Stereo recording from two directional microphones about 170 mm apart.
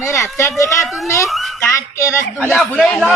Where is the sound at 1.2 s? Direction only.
Centre (ahead or behind).